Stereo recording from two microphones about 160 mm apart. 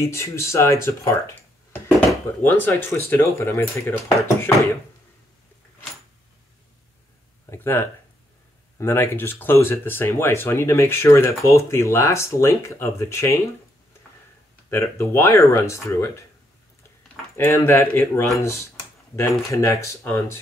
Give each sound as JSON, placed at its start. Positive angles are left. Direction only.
{"t": 0.0, "sound": "speech", "side_deg": 15}
{"t": 7.4, "sound": "a sound", "side_deg": 15}
{"t": 8.7, "sound": "speech", "side_deg": 15}
{"t": 14.7, "sound": "speech", "side_deg": 15}
{"t": 17.4, "sound": "speech", "side_deg": 15}